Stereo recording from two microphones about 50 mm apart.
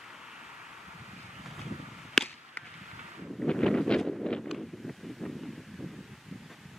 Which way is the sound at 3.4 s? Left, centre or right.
Centre.